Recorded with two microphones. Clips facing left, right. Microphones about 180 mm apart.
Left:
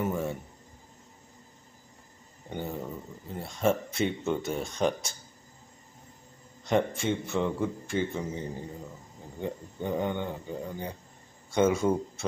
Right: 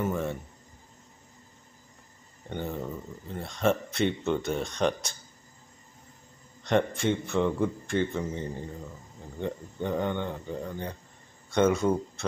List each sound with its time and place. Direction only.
0.0 s speech: 10° left (ahead or behind)
2.5 s a man's voice: 10° left (ahead or behind)
6.6 s a man's voice: 5° left (ahead or behind)
9.4 s speech: 10° left (ahead or behind)